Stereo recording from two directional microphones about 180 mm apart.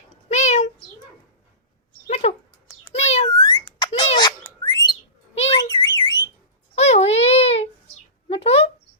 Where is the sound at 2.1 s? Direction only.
35° left (ahead or behind).